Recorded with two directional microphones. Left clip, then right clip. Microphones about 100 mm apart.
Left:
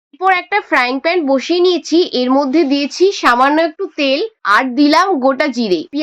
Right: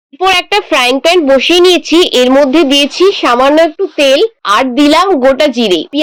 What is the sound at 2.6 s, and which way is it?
Speech, 90° right.